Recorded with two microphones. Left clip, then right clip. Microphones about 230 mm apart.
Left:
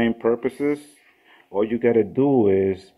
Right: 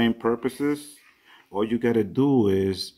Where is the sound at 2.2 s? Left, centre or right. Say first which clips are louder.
Left 4 dB; right.